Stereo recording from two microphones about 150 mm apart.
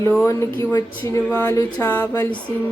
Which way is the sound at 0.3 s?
20° left (ahead or behind).